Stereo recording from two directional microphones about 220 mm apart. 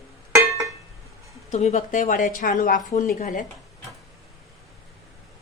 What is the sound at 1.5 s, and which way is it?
A woman's voice, 30° left (ahead or behind).